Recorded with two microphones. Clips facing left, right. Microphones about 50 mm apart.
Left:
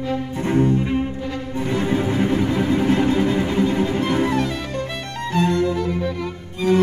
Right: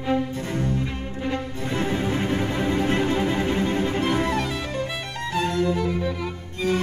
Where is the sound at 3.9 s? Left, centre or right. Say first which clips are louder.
Left 3 dB; centre.